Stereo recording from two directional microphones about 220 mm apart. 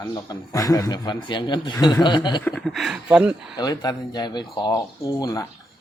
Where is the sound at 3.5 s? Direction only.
15° left (ahead or behind).